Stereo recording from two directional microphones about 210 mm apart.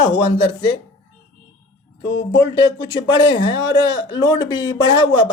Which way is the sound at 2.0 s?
55° left (ahead or behind).